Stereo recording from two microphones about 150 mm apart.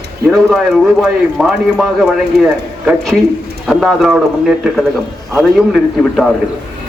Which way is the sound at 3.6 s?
Centre (ahead or behind).